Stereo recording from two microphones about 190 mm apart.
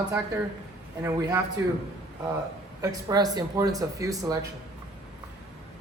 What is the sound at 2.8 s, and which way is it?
Speech, 20° right (ahead or behind).